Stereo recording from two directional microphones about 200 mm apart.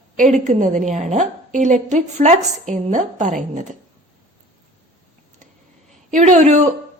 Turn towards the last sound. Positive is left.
turn(degrees=-35)  # may be behind; listen again after turning